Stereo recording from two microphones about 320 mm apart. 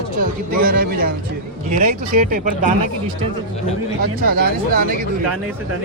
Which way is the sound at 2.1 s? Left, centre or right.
Right.